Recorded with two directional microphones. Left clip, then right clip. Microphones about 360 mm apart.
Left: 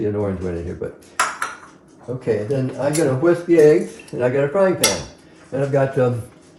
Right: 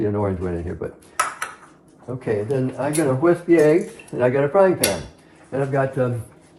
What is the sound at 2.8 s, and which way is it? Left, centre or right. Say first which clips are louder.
A man's voice: left 2 dB; centre.